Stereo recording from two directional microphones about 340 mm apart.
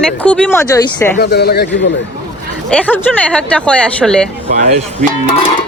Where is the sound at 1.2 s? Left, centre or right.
Left.